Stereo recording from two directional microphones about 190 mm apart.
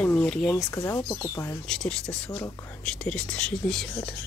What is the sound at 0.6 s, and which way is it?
Speech, 15° left (ahead or behind).